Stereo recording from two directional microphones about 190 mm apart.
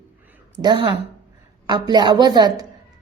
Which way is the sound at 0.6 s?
25° right (ahead or behind).